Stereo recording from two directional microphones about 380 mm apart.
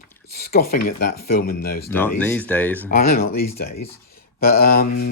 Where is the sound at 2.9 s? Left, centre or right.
Left.